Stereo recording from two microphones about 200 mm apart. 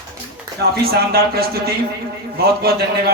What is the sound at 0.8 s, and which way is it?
Speech, 50° right (ahead or behind).